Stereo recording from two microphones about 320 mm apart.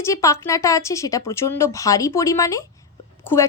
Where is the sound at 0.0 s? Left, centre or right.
Centre.